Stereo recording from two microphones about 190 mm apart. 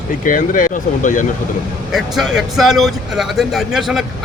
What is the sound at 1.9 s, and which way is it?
Speech, centre (ahead or behind).